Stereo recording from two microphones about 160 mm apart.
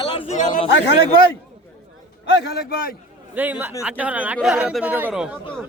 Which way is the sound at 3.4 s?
10° right (ahead or behind).